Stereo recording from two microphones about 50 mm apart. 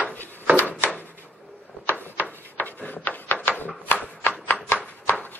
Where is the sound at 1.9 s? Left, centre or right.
Left.